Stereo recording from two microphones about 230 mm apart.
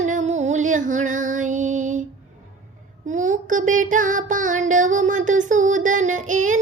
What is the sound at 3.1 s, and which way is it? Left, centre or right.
Music, right.